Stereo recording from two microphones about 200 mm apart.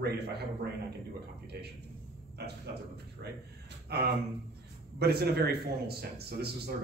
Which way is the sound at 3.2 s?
55° right (ahead or behind).